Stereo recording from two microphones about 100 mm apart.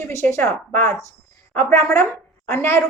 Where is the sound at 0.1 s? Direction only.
25° left (ahead or behind).